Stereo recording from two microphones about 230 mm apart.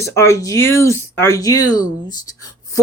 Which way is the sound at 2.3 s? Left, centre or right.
Centre.